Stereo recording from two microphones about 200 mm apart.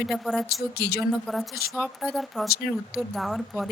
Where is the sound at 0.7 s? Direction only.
50° left (ahead or behind).